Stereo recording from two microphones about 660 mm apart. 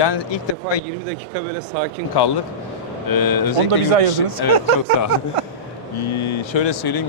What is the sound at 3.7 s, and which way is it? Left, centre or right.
Speech, right.